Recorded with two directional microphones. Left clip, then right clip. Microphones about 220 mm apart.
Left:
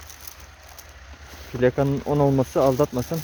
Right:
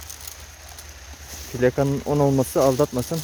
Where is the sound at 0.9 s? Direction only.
30° left (ahead or behind).